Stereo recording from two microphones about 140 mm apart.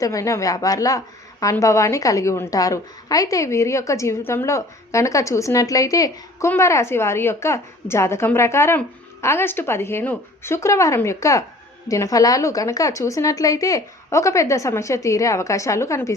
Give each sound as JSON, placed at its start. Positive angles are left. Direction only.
{"t": 0.0, "sound": "a woman's voice", "side_deg": 25}